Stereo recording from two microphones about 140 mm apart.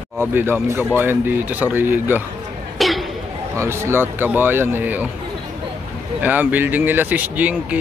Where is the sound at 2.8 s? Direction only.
Centre (ahead or behind).